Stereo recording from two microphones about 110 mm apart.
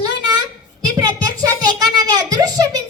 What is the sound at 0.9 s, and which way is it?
Music, 35° right (ahead or behind).